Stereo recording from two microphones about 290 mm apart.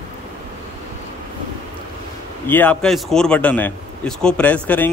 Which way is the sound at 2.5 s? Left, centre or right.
Centre.